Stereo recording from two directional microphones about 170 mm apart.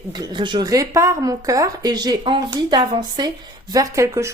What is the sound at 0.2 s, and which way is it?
A woman's voice, 25° right (ahead or behind).